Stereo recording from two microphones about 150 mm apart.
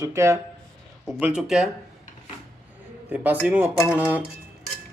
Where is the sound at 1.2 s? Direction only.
5° right (ahead or behind).